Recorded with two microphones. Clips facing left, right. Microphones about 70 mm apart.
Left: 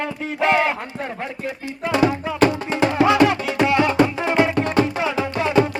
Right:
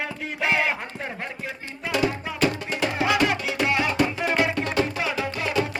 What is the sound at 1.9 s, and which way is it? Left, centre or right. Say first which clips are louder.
Music: left 6 dB; left.